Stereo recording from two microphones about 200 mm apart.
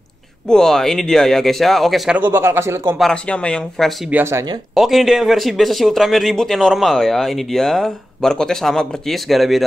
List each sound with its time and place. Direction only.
0.5 s speech: 5° left (ahead or behind)
3.0 s speech: 5° left (ahead or behind)
4.2 s speech: 15° right (ahead or behind)
4.7 s speech: centre (ahead or behind)